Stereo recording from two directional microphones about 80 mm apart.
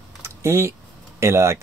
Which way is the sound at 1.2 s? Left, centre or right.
Right.